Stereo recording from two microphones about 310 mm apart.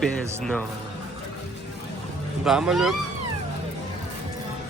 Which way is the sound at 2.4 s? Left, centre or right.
Centre.